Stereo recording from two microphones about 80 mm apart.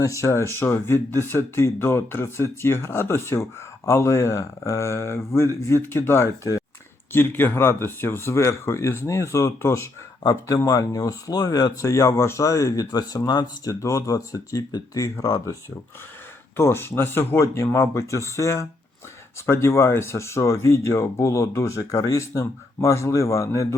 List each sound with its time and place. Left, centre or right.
0.0 s speech: left
13.8 s speech: left
16.6 s speech: left